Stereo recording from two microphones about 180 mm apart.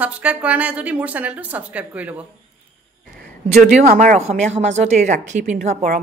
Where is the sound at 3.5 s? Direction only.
55° right (ahead or behind).